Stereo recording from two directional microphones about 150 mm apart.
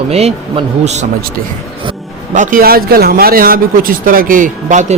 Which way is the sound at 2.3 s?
60° right (ahead or behind).